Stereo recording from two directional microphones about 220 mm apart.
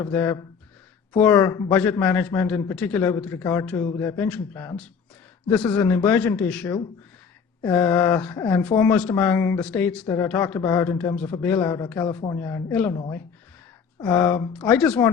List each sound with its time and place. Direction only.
0.0 s a man's voice: 10° left (ahead or behind)
11.9 s a man's voice: 20° left (ahead or behind)
14.1 s a man's voice: 15° left (ahead or behind)
14.5 s speech: 5° left (ahead or behind)